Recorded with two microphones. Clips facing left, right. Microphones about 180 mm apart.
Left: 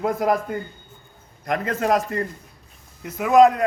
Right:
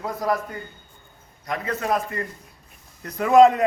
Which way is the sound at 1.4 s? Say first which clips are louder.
Left 4 dB; 50° left (ahead or behind).